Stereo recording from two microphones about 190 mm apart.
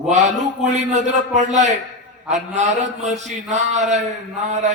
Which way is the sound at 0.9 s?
40° right (ahead or behind).